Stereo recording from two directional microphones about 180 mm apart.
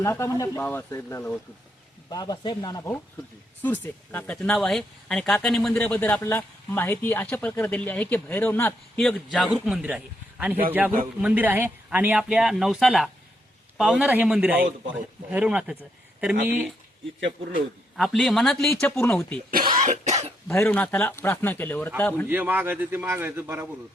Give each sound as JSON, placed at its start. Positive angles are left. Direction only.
{"t": 0.0, "sound": "a man's voice", "side_deg": 15}
{"t": 17.9, "sound": "speech", "side_deg": 0}
{"t": 19.8, "sound": "cough", "side_deg": -40}
{"t": 20.5, "sound": "speech", "side_deg": 10}
{"t": 22.3, "sound": "a man's voice", "side_deg": -10}